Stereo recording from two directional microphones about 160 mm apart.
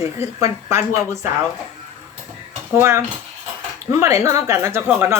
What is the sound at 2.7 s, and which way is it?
Speech, 15° right (ahead or behind).